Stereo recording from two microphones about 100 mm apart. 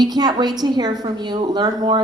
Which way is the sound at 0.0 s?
45° right (ahead or behind).